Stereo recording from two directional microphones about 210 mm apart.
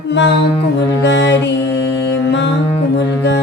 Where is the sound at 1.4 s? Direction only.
60° left (ahead or behind).